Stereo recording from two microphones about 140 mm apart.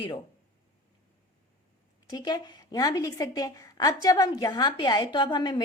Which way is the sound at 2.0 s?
30° left (ahead or behind).